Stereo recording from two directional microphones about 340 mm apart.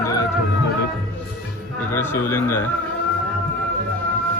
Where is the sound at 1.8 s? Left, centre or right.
Centre.